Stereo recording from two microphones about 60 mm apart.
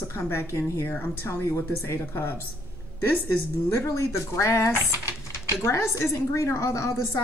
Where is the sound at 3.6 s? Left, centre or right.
Left.